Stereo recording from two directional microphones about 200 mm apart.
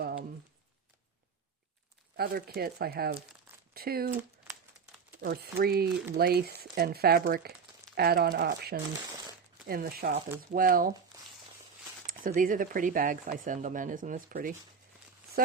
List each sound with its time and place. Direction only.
2.1 s speech: 50° right (ahead or behind)
4.1 s crumpling: 10° right (ahead or behind)
5.2 s speech: 50° right (ahead or behind)
11.1 s a sound: 15° right (ahead or behind)
12.0 s speech: 45° right (ahead or behind)